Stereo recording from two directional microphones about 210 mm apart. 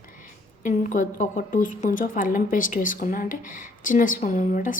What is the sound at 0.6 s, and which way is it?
A woman's voice, 35° left (ahead or behind).